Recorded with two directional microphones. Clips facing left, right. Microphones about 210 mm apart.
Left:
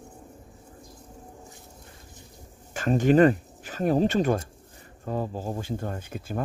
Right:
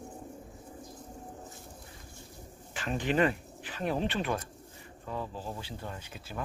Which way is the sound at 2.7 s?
45° left (ahead or behind).